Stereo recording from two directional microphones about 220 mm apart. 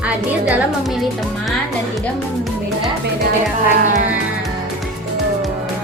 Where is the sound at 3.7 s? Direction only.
35° right (ahead or behind).